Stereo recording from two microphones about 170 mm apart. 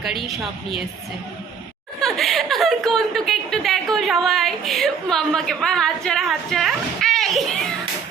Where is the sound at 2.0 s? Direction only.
Centre (ahead or behind).